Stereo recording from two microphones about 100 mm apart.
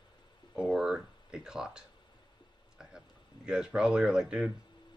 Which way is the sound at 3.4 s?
10° right (ahead or behind).